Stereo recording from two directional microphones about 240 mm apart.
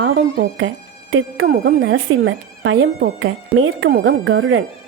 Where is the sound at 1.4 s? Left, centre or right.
Right.